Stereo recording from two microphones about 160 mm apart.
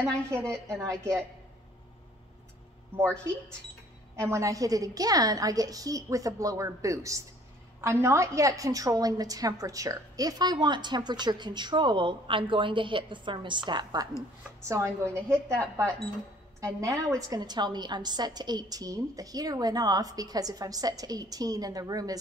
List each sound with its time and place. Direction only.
0.0 s a woman's voice: 15° right (ahead or behind)
4.3 s a woman's voice: 20° right (ahead or behind)